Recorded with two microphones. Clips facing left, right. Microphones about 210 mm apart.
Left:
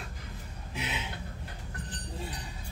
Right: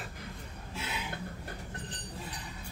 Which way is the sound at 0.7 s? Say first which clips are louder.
Left 2 dB; 20° left (ahead or behind).